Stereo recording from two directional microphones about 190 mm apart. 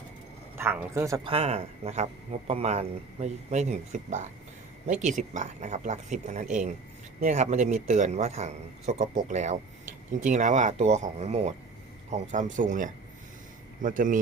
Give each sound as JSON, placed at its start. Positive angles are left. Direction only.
{"t": 0.5, "sound": "speech", "side_deg": -10}
{"t": 1.2, "sound": "a man's voice", "side_deg": -30}